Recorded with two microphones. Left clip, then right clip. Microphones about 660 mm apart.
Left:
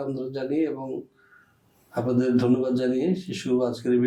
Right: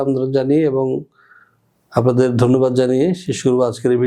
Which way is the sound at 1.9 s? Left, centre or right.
Right.